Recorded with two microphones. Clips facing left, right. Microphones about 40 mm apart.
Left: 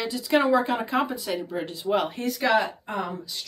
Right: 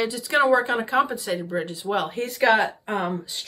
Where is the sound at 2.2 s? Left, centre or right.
Right.